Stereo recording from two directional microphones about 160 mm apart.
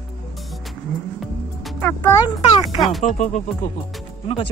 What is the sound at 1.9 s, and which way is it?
Speech, 25° left (ahead or behind).